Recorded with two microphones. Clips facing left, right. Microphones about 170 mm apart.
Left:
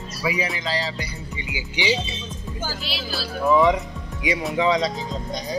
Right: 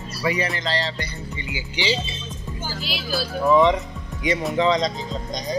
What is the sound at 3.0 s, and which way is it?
Speech, 5° left (ahead or behind).